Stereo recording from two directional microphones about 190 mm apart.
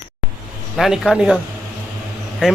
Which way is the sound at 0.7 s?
Centre (ahead or behind).